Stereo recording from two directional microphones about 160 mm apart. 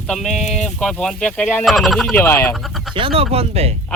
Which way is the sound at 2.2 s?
15° left (ahead or behind).